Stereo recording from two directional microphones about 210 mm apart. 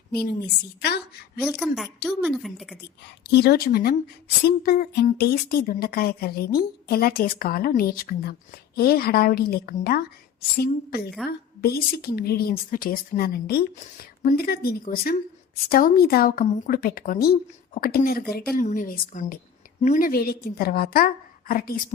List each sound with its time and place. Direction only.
0.1 s a woman's voice: 50° left (ahead or behind)
1.4 s a woman's voice: centre (ahead or behind)
3.2 s a woman's voice: 50° left (ahead or behind)